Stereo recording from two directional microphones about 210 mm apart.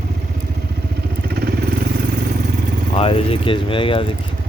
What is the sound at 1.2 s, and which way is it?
Vehicle, 45° right (ahead or behind).